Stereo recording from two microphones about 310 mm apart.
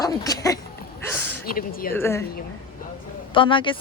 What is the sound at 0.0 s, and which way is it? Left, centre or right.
Speech, centre.